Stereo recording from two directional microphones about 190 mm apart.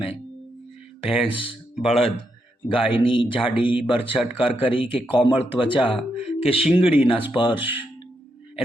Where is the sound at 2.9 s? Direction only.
25° left (ahead or behind).